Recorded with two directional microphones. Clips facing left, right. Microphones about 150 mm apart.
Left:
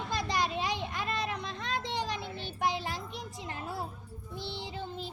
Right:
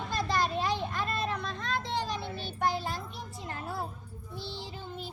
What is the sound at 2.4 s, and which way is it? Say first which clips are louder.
Music: right 1 dB; 15° left (ahead or behind).